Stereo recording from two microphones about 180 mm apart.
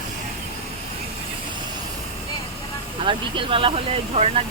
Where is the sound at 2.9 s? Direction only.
30° right (ahead or behind).